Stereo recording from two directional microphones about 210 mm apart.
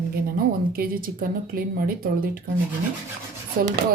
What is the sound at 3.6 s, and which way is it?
Speech, 45° right (ahead or behind).